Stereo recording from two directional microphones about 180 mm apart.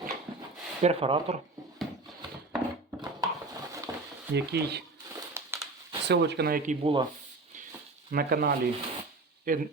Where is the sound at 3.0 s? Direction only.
20° right (ahead or behind).